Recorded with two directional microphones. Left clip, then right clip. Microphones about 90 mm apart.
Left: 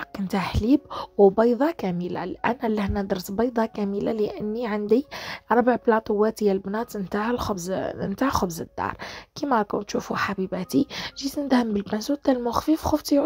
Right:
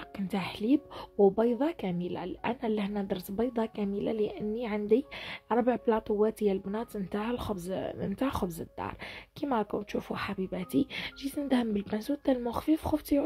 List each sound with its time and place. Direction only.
0.3 s a woman's voice: 50° left (ahead or behind)